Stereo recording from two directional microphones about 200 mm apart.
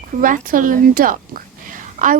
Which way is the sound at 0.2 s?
45° right (ahead or behind).